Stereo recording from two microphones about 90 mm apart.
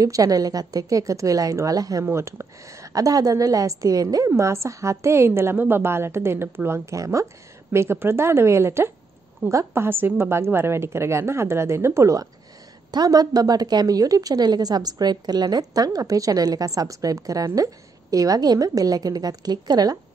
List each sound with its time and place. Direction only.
0.0 s a woman's voice: 40° right (ahead or behind)
2.0 s a woman's voice: 30° right (ahead or behind)
9.8 s a woman's voice: 25° right (ahead or behind)
12.9 s a woman's voice: 45° right (ahead or behind)